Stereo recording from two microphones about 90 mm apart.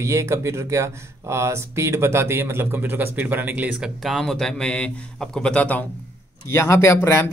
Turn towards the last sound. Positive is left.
turn(degrees=30)  # may be behind; listen again after turning